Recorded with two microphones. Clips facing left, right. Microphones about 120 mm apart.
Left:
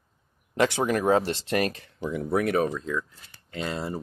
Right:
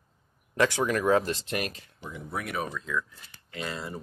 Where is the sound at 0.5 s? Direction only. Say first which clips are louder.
Left 2 dB; 20° left (ahead or behind); by 1.7 s 40° left (ahead or behind).